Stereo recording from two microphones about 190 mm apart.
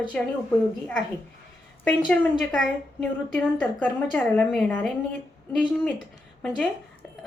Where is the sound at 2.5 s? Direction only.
5° left (ahead or behind).